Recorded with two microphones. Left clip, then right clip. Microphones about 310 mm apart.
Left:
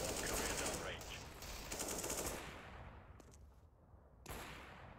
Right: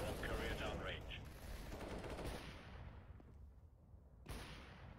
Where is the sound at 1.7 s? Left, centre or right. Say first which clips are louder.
Left 5 dB; left.